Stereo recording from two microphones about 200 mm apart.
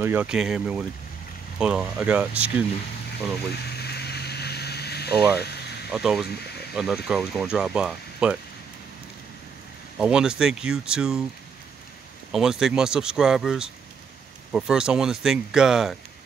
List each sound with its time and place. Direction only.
0.0 s speech: 10° right (ahead or behind)
3.5 s a sound: 55° left (ahead or behind)
5.9 s speech: 5° right (ahead or behind)
9.9 s speech: 5° right (ahead or behind)
12.3 s speech: centre (ahead or behind)